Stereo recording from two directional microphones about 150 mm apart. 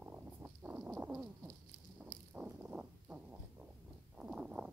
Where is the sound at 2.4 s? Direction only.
10° right (ahead or behind).